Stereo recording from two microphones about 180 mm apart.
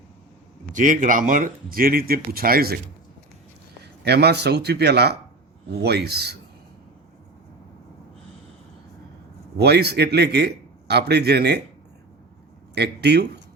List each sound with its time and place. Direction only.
0.7 s speech: 45° right (ahead or behind)
4.0 s a man's voice: 65° right (ahead or behind)
9.6 s a man's voice: 65° right (ahead or behind)
12.7 s speech: 65° right (ahead or behind)